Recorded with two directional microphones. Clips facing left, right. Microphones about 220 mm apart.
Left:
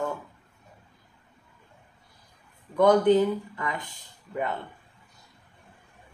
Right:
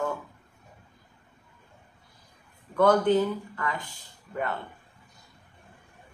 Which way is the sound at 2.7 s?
15° left (ahead or behind).